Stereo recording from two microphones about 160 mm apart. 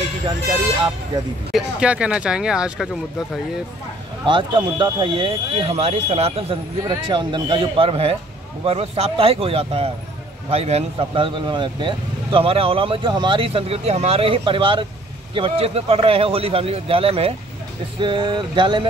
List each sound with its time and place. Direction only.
1.5 s speech: 5° right (ahead or behind)
4.3 s speech: 30° right (ahead or behind)
6.8 s speech: 25° right (ahead or behind)
18.0 s a sound: 30° right (ahead or behind)